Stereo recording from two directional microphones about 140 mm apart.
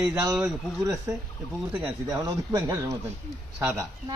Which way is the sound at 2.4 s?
25° right (ahead or behind).